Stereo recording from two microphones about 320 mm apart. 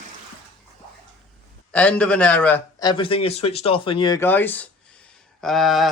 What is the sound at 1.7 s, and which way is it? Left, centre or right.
Speech, centre.